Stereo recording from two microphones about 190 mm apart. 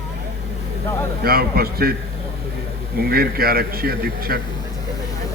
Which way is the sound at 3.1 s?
50° right (ahead or behind).